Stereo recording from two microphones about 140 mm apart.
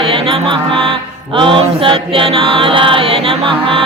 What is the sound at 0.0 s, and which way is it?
Music, 40° right (ahead or behind).